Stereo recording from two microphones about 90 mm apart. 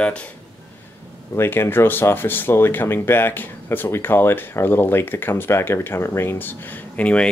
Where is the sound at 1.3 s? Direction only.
25° left (ahead or behind).